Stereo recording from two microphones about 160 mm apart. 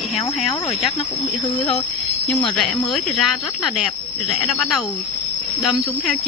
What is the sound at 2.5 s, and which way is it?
Speech, 5° left (ahead or behind).